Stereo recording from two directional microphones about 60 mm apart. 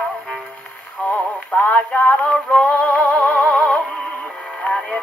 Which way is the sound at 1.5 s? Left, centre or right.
Left.